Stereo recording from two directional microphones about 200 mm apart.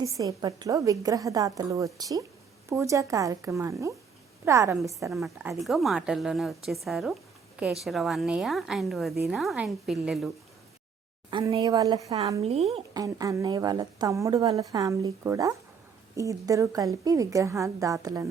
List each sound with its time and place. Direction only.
0.0 s a woman's voice: 15° right (ahead or behind)
5.1 s a woman's voice: centre (ahead or behind)
6.8 s a sound: centre (ahead or behind)
7.9 s a woman's voice: centre (ahead or behind)
11.3 s speech: 25° right (ahead or behind)
12.4 s speech: 30° right (ahead or behind)
12.9 s a woman's voice: 20° right (ahead or behind)